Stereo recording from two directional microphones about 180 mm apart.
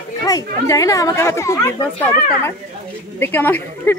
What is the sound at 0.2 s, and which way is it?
Speech, 20° left (ahead or behind).